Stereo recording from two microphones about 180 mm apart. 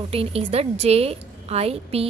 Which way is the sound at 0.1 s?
35° right (ahead or behind).